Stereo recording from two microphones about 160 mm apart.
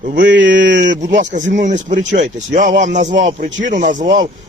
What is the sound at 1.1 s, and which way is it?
Speech, 50° right (ahead or behind).